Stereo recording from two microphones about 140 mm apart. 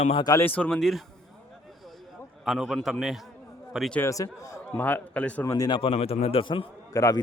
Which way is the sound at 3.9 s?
20° left (ahead or behind).